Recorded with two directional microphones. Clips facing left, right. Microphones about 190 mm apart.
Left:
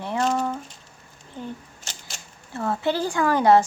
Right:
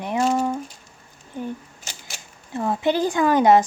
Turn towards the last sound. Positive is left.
turn(degrees=-20)  # may be behind; listen again after turning